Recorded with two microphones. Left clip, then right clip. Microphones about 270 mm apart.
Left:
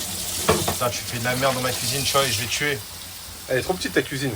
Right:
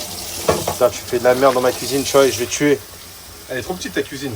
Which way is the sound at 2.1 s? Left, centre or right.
Right.